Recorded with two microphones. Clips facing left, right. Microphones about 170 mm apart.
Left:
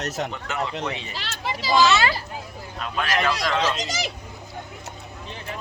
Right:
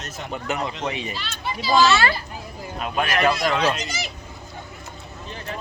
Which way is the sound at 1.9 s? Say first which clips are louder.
Right 1 dB; 20° left (ahead or behind).